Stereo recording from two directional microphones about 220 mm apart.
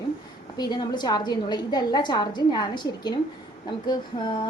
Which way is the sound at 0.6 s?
20° left (ahead or behind).